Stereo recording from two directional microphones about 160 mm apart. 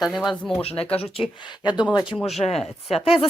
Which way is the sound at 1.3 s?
30° left (ahead or behind).